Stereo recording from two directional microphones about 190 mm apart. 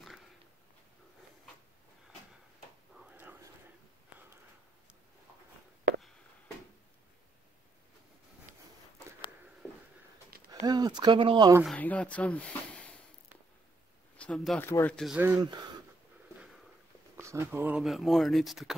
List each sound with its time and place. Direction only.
3.1 s whispering: 10° right (ahead or behind)
8.5 s a sound: 45° right (ahead or behind)
9.6 s a sound: 10° left (ahead or behind)
10.5 s speech: 20° right (ahead or behind)
11.6 s speech: 5° left (ahead or behind)
14.1 s speech: 5° left (ahead or behind)
15.3 s speech: 20° right (ahead or behind)
17.2 s speech: 15° right (ahead or behind)